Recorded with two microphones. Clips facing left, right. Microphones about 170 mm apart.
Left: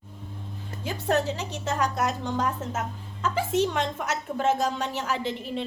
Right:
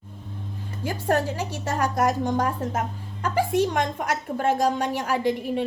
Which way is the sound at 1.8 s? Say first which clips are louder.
Right 6 dB; 50° right (ahead or behind).